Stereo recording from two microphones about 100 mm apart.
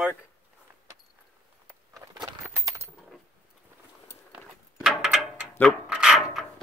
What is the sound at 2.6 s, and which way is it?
Coin, 30° right (ahead or behind).